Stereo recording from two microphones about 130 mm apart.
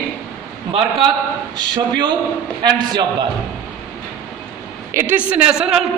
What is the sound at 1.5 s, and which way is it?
A man's voice, 35° right (ahead or behind).